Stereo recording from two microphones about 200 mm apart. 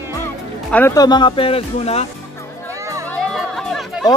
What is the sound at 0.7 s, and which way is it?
Speech, 15° left (ahead or behind).